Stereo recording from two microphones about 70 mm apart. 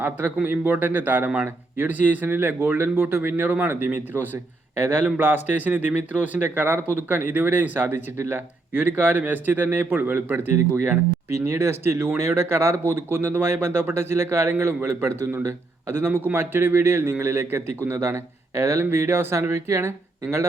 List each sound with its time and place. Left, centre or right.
0.0 s a man's voice: right